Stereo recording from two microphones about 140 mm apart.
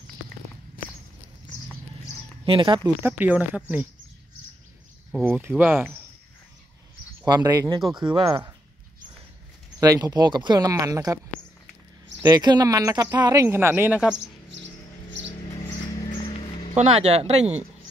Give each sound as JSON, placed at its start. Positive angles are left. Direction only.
{"t": 2.4, "sound": "speech", "side_deg": -35}
{"t": 3.0, "sound": "speech", "side_deg": -15}
{"t": 5.1, "sound": "speech", "side_deg": -10}
{"t": 7.2, "sound": "speech", "side_deg": -25}
{"t": 9.8, "sound": "speech", "side_deg": -25}
{"t": 12.3, "sound": "speech", "side_deg": -30}
{"t": 16.7, "sound": "speech", "side_deg": -50}